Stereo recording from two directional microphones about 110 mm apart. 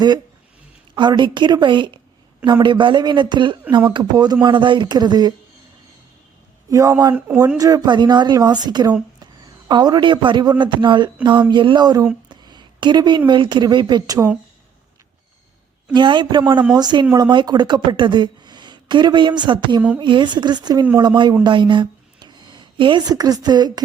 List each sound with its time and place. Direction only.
0.9 s a woman's voice: 45° right (ahead or behind)
6.7 s a woman's voice: 30° right (ahead or behind)
7.1 s speech: 15° right (ahead or behind)
7.6 s a woman's voice: 40° right (ahead or behind)
16.0 s a woman's voice: 45° right (ahead or behind)